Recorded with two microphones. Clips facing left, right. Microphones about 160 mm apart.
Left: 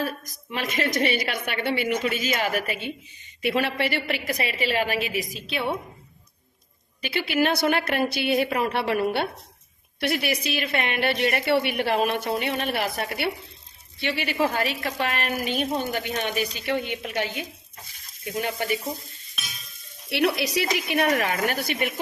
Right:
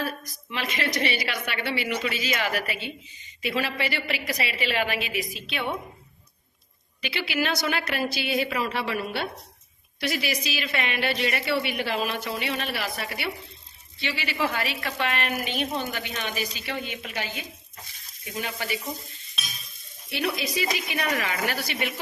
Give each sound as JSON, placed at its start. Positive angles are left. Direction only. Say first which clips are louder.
{"t": 0.5, "sound": "a woman's voice", "louder": "left 3 dB", "side_deg": 45}
{"t": 3.4, "sound": "a woman's voice", "louder": "left 4 dB", "side_deg": 60}
{"t": 7.0, "sound": "a woman's voice", "louder": "left 4 dB", "side_deg": 45}
{"t": 14.3, "sound": "a woman's voice", "louder": "left 3 dB", "side_deg": 40}
{"t": 16.2, "sound": "a woman's voice", "louder": "left 4 dB", "side_deg": 55}
{"t": 18.3, "sound": "a woman's voice", "louder": "left 5 dB", "side_deg": 55}
{"t": 20.1, "sound": "a woman's voice", "louder": "left 5 dB", "side_deg": 80}